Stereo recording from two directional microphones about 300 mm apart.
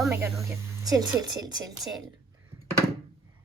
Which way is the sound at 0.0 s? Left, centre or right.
Centre.